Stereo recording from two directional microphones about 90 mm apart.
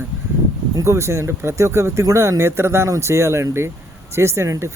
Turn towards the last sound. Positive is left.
turn(degrees=-35)  # may be behind; listen again after turning